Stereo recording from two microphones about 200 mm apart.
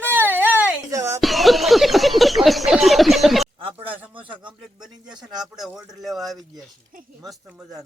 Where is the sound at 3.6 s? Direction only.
25° right (ahead or behind).